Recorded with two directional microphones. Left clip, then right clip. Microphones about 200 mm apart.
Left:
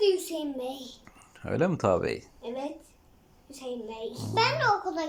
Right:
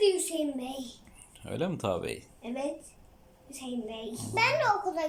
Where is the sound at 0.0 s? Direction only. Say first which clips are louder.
Left 1 dB; 15° right (ahead or behind).